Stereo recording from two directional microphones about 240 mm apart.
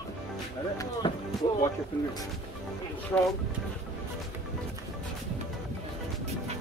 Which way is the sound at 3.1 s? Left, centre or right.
Centre.